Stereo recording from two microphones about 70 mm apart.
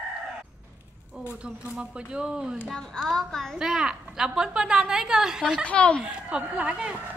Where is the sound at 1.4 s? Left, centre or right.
Centre.